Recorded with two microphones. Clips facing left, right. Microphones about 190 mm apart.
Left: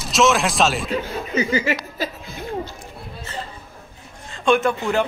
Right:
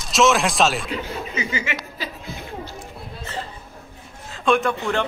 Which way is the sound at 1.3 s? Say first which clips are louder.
Left 9 dB; 40° left (ahead or behind).